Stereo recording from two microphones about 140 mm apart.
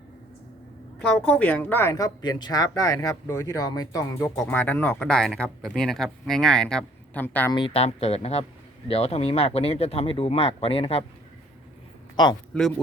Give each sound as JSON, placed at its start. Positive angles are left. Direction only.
{"t": 0.9, "sound": "a woman's voice", "side_deg": 10}
{"t": 4.4, "sound": "speech", "side_deg": 15}
{"t": 7.5, "sound": "speech", "side_deg": 40}
{"t": 12.1, "sound": "speech", "side_deg": 30}